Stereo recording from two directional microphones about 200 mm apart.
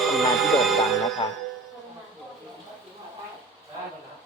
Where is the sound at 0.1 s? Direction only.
Centre (ahead or behind).